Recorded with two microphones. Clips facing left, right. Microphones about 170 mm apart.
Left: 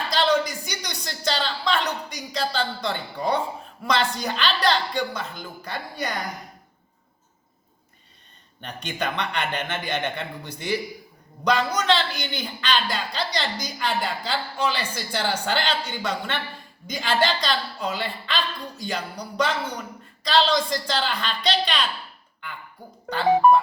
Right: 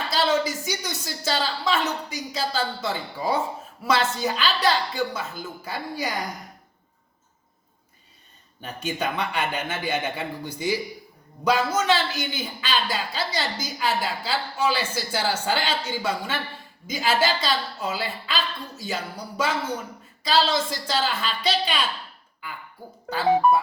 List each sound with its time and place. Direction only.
0.1 s a sound: 5° right (ahead or behind)
0.7 s a woman's voice: 5° right (ahead or behind)
8.6 s a woman's voice: 5° right (ahead or behind)
23.0 s a woman's voice: 5° right (ahead or behind)